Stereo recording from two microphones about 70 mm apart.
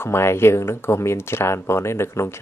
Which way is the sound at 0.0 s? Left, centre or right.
Left.